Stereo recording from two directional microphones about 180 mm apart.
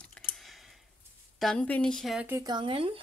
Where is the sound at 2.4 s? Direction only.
25° right (ahead or behind).